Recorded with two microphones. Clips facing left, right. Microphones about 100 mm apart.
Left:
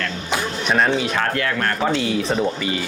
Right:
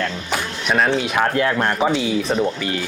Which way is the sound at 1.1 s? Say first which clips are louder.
Right 3 dB; 20° right (ahead or behind).